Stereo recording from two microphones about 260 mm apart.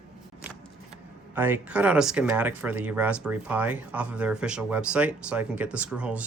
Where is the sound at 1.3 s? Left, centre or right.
Centre.